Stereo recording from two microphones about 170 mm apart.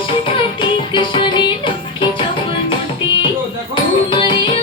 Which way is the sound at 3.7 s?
30° left (ahead or behind).